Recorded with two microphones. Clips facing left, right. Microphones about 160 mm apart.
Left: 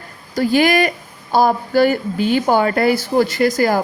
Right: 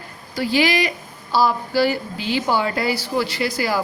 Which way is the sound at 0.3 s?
50° left (ahead or behind).